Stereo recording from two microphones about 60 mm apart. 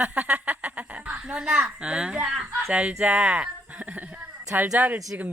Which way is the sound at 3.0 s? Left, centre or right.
Right.